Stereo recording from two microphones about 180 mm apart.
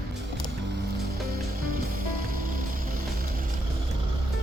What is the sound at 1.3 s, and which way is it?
Music, 50° right (ahead or behind).